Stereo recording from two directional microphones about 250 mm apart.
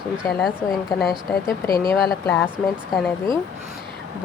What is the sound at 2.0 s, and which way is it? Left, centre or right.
Speech, centre.